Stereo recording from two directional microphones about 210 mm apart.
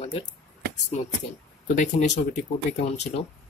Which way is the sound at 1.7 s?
35° left (ahead or behind).